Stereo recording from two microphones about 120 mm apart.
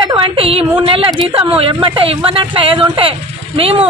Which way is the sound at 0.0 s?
45° right (ahead or behind).